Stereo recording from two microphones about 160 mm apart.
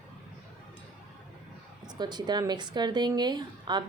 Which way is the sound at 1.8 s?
25° right (ahead or behind).